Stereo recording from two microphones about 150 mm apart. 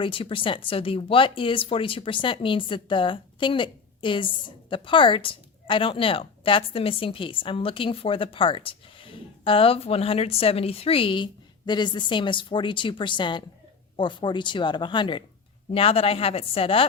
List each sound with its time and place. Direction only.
0.0 s speech: 35° left (ahead or behind)